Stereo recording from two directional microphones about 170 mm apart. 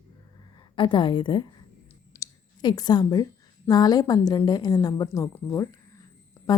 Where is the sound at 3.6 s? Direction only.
25° left (ahead or behind).